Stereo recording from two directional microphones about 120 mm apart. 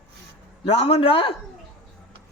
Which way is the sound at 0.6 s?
60° left (ahead or behind).